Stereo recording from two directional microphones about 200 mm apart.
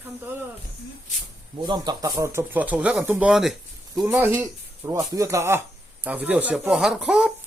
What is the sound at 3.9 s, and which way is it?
Speech, 15° right (ahead or behind).